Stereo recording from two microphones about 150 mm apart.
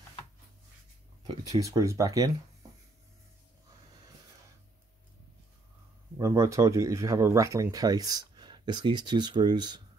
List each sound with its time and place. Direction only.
1.2 s speech: 25° right (ahead or behind)
6.1 s speech: 20° right (ahead or behind)